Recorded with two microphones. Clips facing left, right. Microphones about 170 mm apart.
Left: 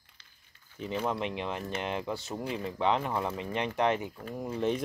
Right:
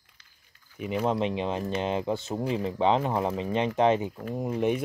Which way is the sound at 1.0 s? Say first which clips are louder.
Right 6 dB; 25° right (ahead or behind).